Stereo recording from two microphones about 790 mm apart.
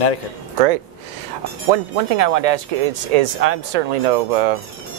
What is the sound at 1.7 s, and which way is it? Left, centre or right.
Speech, right.